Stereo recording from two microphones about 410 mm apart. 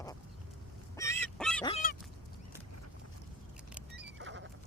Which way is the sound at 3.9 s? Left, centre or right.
Right.